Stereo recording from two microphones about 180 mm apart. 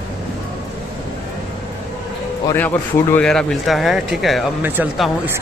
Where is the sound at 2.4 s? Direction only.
10° left (ahead or behind); by 5.3 s 10° right (ahead or behind).